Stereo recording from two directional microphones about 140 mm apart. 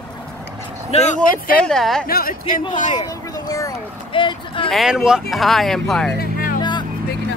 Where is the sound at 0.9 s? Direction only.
50° left (ahead or behind).